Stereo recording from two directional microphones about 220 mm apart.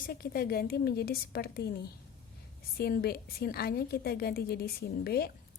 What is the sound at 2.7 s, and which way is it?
A woman's voice, 45° left (ahead or behind).